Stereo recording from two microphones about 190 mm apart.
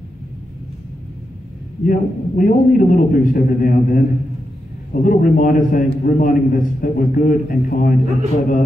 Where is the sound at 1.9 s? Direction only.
45° left (ahead or behind).